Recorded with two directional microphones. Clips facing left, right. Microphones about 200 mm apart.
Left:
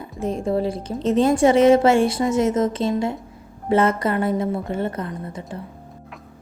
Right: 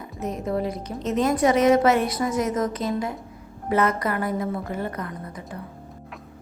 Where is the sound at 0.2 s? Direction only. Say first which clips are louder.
Left 4 dB; 30° left (ahead or behind).